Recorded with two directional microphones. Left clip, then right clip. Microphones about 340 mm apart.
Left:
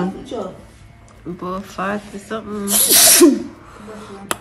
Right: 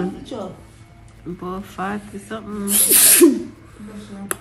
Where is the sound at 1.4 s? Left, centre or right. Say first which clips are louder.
Left 4 dB; centre.